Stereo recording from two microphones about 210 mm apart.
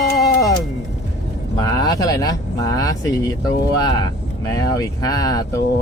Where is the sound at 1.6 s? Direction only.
20° left (ahead or behind).